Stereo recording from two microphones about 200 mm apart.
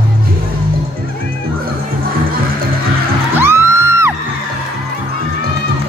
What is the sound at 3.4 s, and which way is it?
Music, 10° right (ahead or behind).